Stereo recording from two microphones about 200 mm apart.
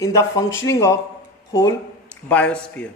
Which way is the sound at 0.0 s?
15° left (ahead or behind).